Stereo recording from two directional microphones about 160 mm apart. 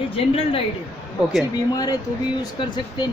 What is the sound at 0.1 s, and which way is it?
Speech, 35° left (ahead or behind).